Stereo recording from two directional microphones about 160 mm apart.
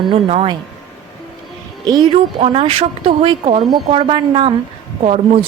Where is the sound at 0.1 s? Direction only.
35° right (ahead or behind).